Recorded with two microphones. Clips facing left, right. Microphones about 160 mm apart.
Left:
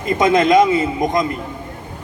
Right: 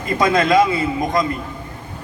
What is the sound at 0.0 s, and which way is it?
A man's voice, 20° left (ahead or behind).